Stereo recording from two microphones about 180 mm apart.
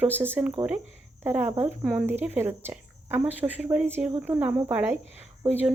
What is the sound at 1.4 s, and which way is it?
Cricket, 35° right (ahead or behind).